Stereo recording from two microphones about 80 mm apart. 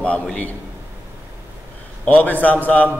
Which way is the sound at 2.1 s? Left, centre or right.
Left.